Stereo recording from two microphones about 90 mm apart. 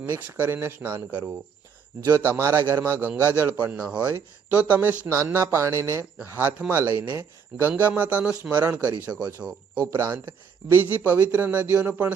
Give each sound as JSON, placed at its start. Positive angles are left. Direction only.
{"t": 0.2, "sound": "speech", "side_deg": -20}
{"t": 4.1, "sound": "speech", "side_deg": -25}
{"t": 6.2, "sound": "speech", "side_deg": -25}
{"t": 9.7, "sound": "speech", "side_deg": -40}
{"t": 10.7, "sound": "speech", "side_deg": -20}